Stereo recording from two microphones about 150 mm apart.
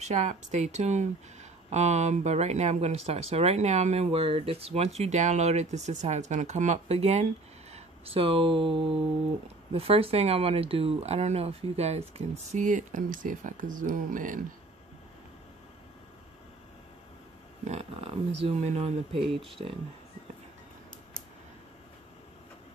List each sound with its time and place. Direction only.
0.0 s speech: 50° right (ahead or behind)
12.2 s speech: 55° right (ahead or behind)
17.6 s speech: 40° right (ahead or behind)